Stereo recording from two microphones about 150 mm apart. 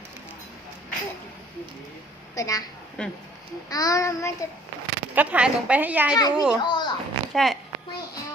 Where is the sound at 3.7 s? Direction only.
25° left (ahead or behind).